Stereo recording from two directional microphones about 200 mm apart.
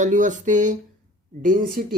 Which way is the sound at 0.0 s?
40° right (ahead or behind).